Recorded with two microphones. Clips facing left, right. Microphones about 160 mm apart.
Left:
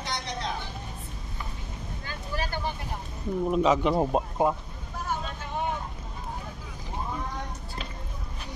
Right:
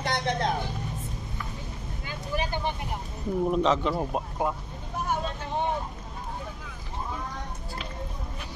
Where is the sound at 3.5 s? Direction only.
10° left (ahead or behind).